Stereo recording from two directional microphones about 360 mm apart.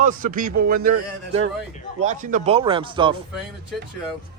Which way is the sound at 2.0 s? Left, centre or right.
Right.